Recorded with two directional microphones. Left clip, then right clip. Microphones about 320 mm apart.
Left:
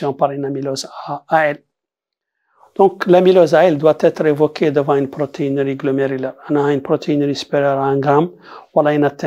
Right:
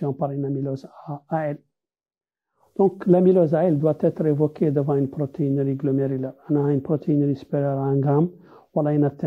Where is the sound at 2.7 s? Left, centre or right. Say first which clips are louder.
Left 8 dB; left.